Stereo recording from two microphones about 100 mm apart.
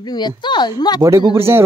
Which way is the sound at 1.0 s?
35° right (ahead or behind).